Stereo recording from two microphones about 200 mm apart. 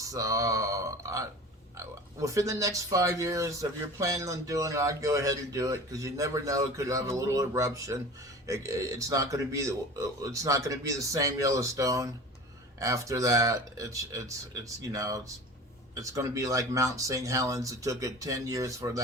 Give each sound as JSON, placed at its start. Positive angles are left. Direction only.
{"t": 0.0, "sound": "speech", "side_deg": -15}